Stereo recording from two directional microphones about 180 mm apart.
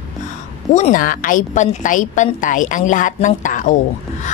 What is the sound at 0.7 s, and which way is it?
A woman's voice, 45° left (ahead or behind).